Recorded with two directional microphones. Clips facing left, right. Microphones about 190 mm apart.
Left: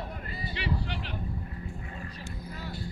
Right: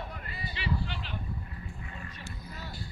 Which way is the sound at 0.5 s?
65° left (ahead or behind).